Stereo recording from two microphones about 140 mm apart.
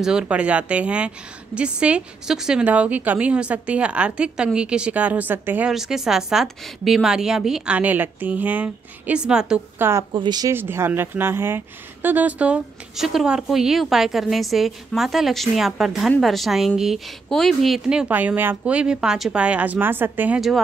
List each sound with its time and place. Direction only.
0.0 s a woman's voice: 5° right (ahead or behind)
5.7 s speech: 5° right (ahead or behind)
9.8 s a woman's voice: 15° right (ahead or behind)
10.1 s speech: 30° right (ahead or behind)
10.5 s speech: 15° right (ahead or behind)
20.3 s speech: centre (ahead or behind)